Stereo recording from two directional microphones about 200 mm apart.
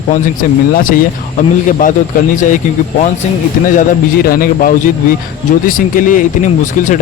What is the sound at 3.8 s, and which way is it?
Speech, 45° left (ahead or behind).